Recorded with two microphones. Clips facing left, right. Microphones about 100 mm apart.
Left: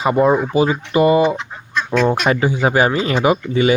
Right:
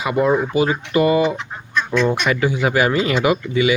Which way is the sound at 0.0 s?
30° left (ahead or behind).